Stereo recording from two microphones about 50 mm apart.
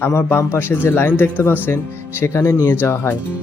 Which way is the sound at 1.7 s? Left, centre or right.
Left.